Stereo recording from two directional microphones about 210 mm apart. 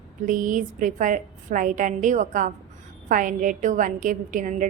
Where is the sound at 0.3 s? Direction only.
40° right (ahead or behind).